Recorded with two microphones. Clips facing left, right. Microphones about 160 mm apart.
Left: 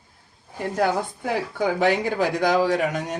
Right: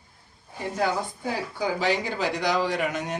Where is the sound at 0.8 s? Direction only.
55° left (ahead or behind).